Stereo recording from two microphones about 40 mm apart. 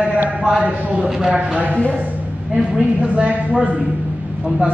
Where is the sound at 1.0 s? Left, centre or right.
Centre.